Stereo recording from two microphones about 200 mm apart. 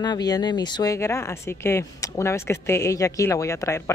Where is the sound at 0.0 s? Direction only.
20° left (ahead or behind).